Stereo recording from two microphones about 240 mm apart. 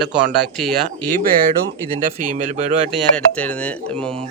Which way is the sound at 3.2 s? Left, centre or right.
Centre.